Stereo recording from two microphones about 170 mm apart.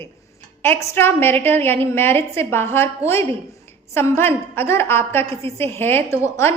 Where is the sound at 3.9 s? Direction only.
15° left (ahead or behind).